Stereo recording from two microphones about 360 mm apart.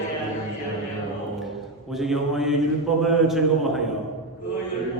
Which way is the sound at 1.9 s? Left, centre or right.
Centre.